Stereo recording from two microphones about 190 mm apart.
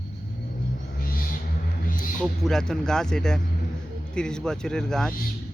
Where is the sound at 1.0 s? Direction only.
50° left (ahead or behind).